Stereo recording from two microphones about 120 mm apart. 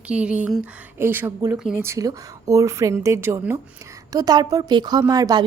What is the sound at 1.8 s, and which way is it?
Speech, 25° right (ahead or behind).